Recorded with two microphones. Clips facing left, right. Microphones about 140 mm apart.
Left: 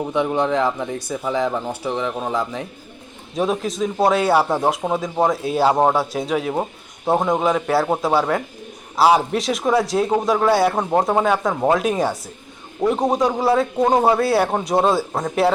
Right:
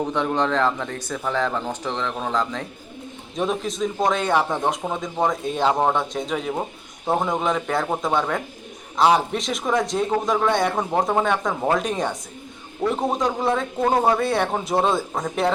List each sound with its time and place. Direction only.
0.1 s speech: 15° left (ahead or behind)
3.3 s speech: centre (ahead or behind)
6.5 s a man's voice: 20° left (ahead or behind)
7.2 s speech: 5° left (ahead or behind)
12.8 s a man's voice: 20° left (ahead or behind)
13.1 s speech: 5° left (ahead or behind)
13.8 s speech: 15° left (ahead or behind)
14.1 s speech: 5° left (ahead or behind)